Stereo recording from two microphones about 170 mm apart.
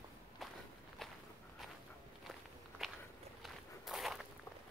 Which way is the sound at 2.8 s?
Centre (ahead or behind).